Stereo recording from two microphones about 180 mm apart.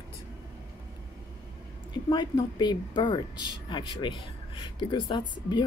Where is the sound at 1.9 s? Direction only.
25° left (ahead or behind).